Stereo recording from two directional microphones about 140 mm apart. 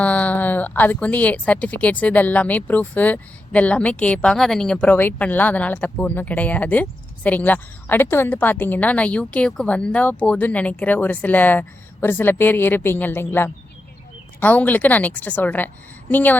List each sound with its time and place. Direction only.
0.0 s speech: 10° left (ahead or behind)